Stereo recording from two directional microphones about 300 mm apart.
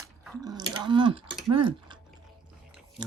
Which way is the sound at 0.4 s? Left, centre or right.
Centre.